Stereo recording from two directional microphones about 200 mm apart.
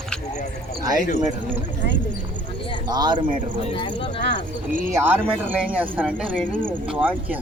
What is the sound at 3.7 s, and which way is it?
Speech, 25° left (ahead or behind).